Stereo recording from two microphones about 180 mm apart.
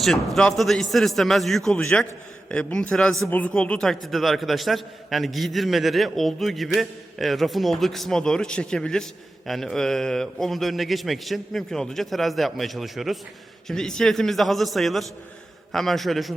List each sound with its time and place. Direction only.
0.3 s a man's voice: centre (ahead or behind)